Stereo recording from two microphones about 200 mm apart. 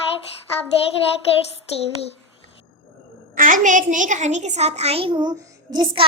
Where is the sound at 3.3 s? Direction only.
40° right (ahead or behind).